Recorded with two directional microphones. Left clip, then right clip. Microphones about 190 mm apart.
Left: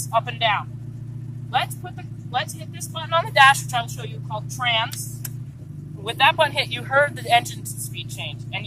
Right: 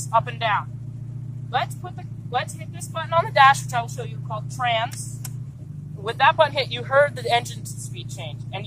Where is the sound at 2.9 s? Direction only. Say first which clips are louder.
Even; 10° right (ahead or behind).